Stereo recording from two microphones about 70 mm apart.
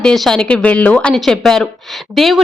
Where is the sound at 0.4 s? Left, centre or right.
Centre.